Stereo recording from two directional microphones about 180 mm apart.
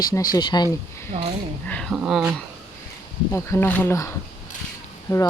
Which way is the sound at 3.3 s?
15° left (ahead or behind).